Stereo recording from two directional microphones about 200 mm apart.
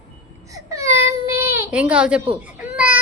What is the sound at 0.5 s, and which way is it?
Baby cry, 15° right (ahead or behind).